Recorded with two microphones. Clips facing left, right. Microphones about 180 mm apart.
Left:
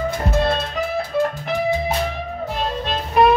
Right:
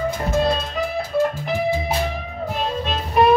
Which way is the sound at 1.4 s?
5° right (ahead or behind).